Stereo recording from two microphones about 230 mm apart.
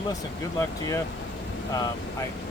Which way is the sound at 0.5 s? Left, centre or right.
Centre.